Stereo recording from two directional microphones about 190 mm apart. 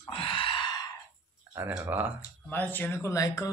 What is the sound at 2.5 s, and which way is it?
Speech, 10° left (ahead or behind).